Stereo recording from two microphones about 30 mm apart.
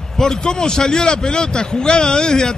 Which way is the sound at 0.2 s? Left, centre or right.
Left.